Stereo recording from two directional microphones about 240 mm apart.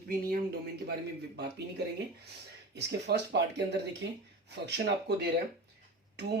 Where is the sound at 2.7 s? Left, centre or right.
Right.